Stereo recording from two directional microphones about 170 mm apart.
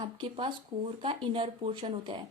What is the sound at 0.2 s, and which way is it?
Speech, 30° right (ahead or behind).